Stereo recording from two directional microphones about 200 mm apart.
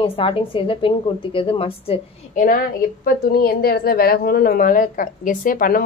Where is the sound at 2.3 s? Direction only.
40° left (ahead or behind).